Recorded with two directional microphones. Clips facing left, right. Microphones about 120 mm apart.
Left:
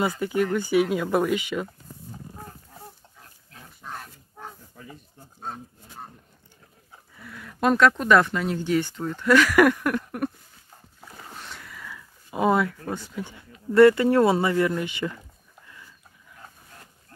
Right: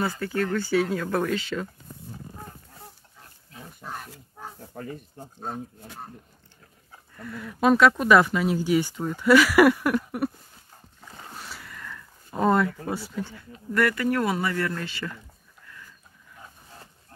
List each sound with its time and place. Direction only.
0.2 s speech: 15° left (ahead or behind)
3.2 s pig: centre (ahead or behind)
4.6 s a sound: 60° right (ahead or behind)
7.2 s speech: centre (ahead or behind)
11.1 s boat: centre (ahead or behind)
12.7 s speech: 10° right (ahead or behind)
13.2 s speech: 20° left (ahead or behind)